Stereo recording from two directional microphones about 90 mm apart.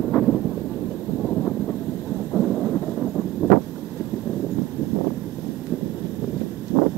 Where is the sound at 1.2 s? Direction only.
10° left (ahead or behind).